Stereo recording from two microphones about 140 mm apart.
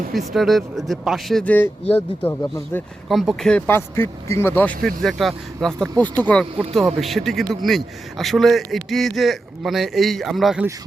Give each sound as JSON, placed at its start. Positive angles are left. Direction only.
{"t": 0.1, "sound": "a man's voice", "side_deg": 0}
{"t": 3.1, "sound": "a man's voice", "side_deg": 0}
{"t": 3.7, "sound": "speech", "side_deg": 15}
{"t": 4.8, "sound": "a man's voice", "side_deg": 0}
{"t": 6.6, "sound": "a man's voice", "side_deg": 0}